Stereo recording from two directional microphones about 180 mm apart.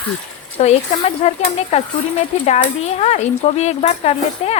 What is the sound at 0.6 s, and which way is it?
Speech, 35° left (ahead or behind).